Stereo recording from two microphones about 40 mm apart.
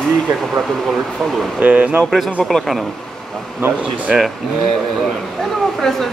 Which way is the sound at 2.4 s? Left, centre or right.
Centre.